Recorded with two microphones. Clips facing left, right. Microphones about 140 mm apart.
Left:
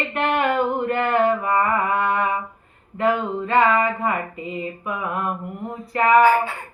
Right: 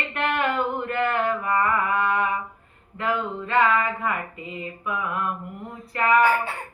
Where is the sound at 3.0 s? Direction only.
50° left (ahead or behind).